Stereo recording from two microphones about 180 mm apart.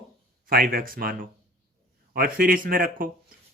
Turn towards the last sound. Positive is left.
turn(degrees=-50)  # may be behind; listen again after turning